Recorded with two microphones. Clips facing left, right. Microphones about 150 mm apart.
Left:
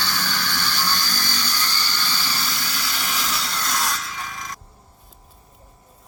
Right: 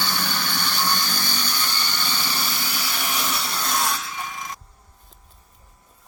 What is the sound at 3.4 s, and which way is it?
Music, 15° right (ahead or behind).